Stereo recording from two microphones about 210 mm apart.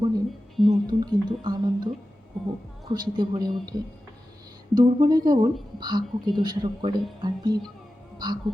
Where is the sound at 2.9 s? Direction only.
20° right (ahead or behind).